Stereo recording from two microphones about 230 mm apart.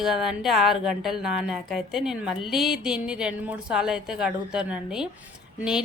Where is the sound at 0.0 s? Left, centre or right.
Centre.